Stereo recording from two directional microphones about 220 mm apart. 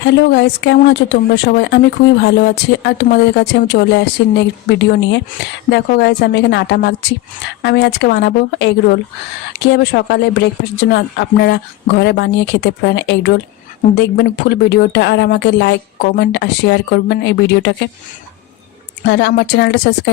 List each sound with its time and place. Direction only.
0.0 s speech: 50° left (ahead or behind)
19.0 s speech: 50° left (ahead or behind)